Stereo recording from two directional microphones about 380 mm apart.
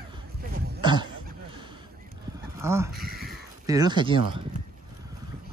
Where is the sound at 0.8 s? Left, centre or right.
Centre.